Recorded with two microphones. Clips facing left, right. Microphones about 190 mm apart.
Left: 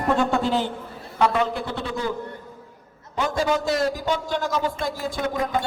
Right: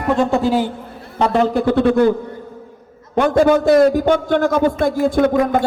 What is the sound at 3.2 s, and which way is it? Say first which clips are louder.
A man's voice: right 10 dB; 60° right (ahead or behind).